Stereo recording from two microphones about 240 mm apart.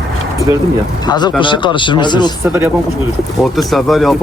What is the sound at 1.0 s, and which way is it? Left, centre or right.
Speech, centre.